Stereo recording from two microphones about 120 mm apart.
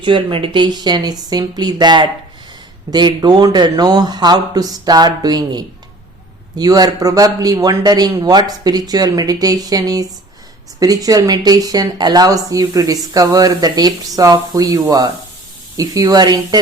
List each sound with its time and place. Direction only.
0.0 s speech: 45° right (ahead or behind)